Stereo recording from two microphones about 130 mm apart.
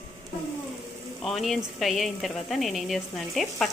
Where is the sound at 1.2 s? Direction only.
Centre (ahead or behind).